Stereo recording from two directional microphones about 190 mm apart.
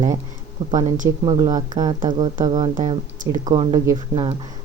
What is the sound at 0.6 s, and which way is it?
Speech, 20° right (ahead or behind).